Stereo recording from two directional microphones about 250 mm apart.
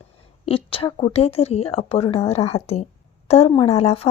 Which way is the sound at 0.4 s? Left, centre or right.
Left.